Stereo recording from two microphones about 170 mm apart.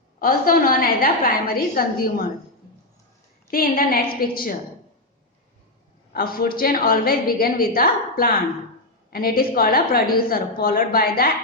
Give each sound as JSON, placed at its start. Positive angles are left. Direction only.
{"t": 0.2, "sound": "a woman's voice", "side_deg": 60}
{"t": 3.5, "sound": "a woman's voice", "side_deg": 55}
{"t": 6.1, "sound": "a woman's voice", "side_deg": 60}